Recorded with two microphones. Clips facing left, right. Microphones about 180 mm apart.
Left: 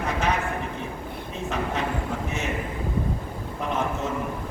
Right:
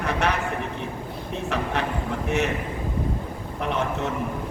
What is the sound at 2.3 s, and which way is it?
Speech, 65° right (ahead or behind).